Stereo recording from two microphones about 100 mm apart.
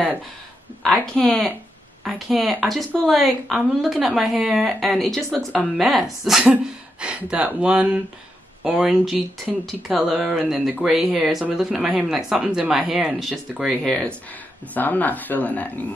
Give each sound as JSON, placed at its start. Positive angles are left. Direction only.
{"t": 1.0, "sound": "a woman's voice", "side_deg": 5}